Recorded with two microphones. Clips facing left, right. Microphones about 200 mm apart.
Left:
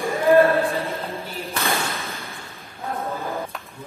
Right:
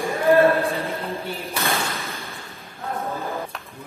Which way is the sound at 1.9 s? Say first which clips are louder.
Even; centre (ahead or behind).